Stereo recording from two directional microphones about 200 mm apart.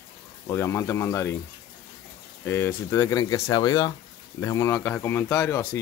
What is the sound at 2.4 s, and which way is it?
Speech, 10° left (ahead or behind).